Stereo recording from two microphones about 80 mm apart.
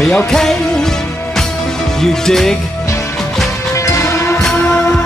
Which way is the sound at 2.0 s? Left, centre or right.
Centre.